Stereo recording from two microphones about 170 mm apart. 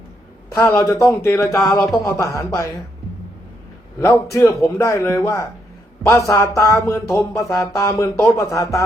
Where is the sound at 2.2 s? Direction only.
20° left (ahead or behind).